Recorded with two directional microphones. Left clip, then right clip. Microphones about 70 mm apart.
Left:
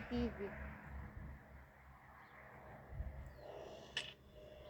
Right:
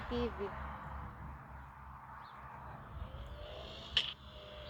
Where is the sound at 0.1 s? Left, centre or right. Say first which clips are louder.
Right 5 dB; centre.